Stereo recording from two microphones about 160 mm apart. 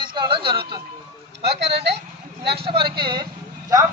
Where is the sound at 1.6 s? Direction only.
90° right.